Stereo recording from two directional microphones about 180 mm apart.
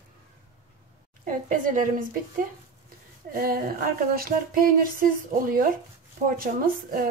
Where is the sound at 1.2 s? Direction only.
45° right (ahead or behind).